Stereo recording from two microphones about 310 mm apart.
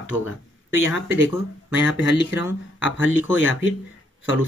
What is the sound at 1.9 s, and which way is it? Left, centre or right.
Speech, left.